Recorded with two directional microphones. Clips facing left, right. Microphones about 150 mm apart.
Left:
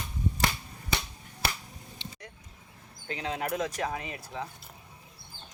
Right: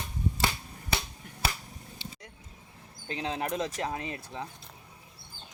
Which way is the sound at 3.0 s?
25° right (ahead or behind).